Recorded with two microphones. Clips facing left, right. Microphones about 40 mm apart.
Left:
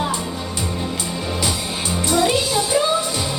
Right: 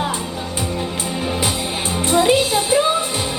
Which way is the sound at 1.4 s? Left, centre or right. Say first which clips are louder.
Right 2 dB; right.